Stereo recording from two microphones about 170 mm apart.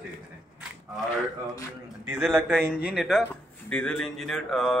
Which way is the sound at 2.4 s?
5° left (ahead or behind).